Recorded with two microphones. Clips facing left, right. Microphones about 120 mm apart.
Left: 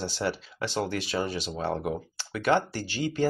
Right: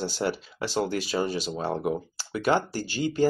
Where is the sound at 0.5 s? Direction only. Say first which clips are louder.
Right 2 dB; 35° right (ahead or behind).